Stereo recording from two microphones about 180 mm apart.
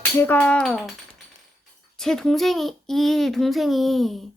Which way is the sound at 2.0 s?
Centre (ahead or behind).